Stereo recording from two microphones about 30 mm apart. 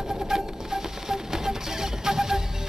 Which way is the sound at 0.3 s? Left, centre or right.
Centre.